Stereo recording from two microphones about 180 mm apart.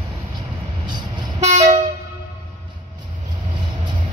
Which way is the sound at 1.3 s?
40° right (ahead or behind).